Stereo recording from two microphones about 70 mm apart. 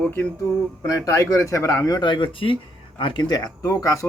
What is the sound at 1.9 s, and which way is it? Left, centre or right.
Speech, left.